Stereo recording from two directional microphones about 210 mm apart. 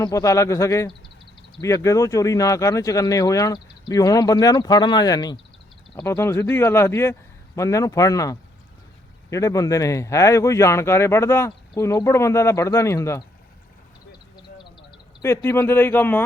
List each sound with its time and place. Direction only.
0.0 s speech: 15° left (ahead or behind)
14.6 s a sound: 20° left (ahead or behind)
15.3 s speech: 10° left (ahead or behind)